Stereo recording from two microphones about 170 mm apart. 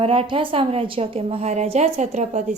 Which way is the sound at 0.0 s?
30° right (ahead or behind).